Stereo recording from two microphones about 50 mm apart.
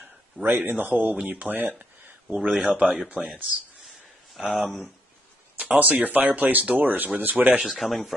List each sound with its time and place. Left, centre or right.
0.0 s a sound: right
0.7 s a man's voice: right
1.2 s speech: right
1.5 s a sound: right
2.5 s speech: centre
3.2 s speech: right
4.4 s speech: centre
5.6 s a man's voice: right
7.5 s speech: centre